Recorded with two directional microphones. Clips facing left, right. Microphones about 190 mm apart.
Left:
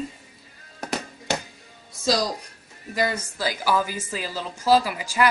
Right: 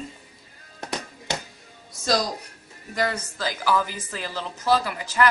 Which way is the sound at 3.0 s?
10° left (ahead or behind).